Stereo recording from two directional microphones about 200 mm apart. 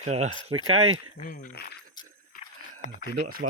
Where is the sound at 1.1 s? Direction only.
45° left (ahead or behind).